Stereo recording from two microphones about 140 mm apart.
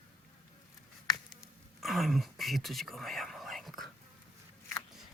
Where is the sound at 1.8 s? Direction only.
Centre (ahead or behind).